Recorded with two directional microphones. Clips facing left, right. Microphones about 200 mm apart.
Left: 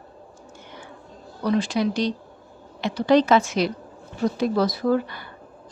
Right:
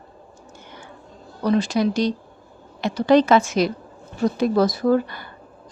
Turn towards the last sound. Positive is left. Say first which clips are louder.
# right 3 dB
turn(degrees=-45)  # may be behind; listen again after turning